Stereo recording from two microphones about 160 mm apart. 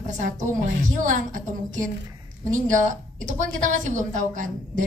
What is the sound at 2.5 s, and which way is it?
A woman's voice, 50° right (ahead or behind).